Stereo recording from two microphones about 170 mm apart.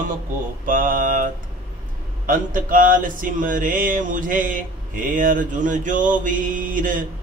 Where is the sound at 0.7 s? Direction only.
55° right (ahead or behind).